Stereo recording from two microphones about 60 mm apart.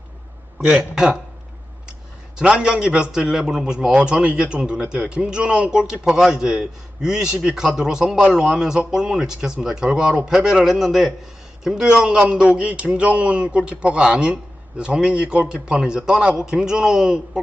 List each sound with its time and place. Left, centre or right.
0.6 s a man's voice: centre
2.4 s a man's voice: centre